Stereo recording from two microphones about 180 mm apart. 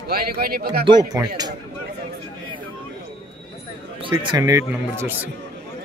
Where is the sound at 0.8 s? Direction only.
25° right (ahead or behind).